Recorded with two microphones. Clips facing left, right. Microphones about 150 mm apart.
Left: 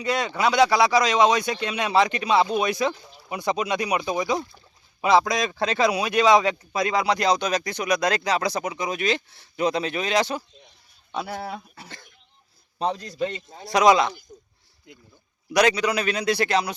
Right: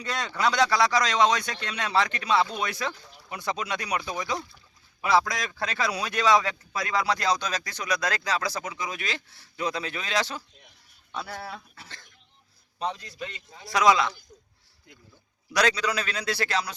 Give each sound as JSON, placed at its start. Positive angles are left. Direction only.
{"t": 0.0, "sound": "speech", "side_deg": 10}
{"t": 3.0, "sound": "a sound", "side_deg": 5}
{"t": 3.2, "sound": "speech", "side_deg": 15}
{"t": 12.8, "sound": "a man's voice", "side_deg": 40}
{"t": 13.7, "sound": "speech", "side_deg": 20}
{"t": 15.5, "sound": "speech", "side_deg": 15}